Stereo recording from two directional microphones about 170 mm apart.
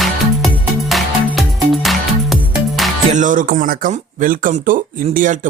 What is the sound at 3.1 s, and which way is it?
Speech, 50° right (ahead or behind).